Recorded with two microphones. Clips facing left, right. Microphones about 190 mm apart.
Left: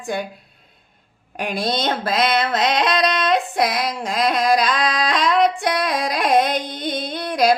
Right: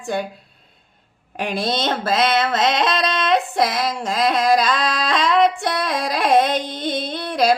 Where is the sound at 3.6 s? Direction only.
15° left (ahead or behind).